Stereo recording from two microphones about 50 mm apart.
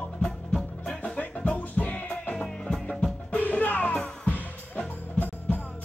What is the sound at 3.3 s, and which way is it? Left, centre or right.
Music, left.